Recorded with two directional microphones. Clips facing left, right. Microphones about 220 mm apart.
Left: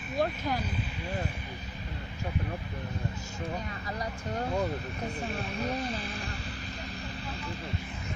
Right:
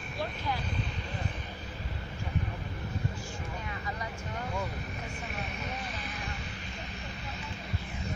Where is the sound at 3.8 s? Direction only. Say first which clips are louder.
Left 3 dB; 35° left (ahead or behind).